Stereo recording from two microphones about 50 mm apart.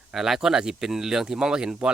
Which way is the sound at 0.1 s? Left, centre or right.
Centre.